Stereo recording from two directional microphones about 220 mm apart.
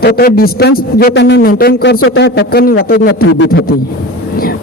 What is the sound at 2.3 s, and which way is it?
Speech, 45° left (ahead or behind).